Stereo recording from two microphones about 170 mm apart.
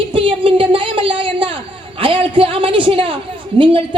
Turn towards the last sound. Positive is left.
turn(degrees=-30)  # may be behind; listen again after turning